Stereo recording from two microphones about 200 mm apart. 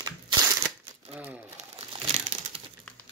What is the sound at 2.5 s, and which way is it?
Crumpling, 30° right (ahead or behind).